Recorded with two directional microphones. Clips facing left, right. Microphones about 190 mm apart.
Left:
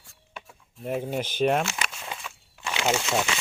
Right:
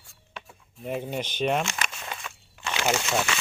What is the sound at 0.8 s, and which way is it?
Walk, 5° left (ahead or behind).